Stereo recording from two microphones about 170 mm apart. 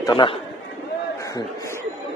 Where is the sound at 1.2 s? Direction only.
20° left (ahead or behind).